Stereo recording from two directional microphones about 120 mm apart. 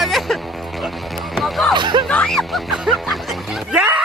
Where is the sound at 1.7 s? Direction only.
40° right (ahead or behind).